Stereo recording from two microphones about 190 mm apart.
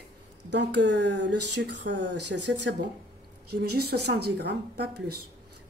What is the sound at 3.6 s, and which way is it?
Speech, 55° right (ahead or behind).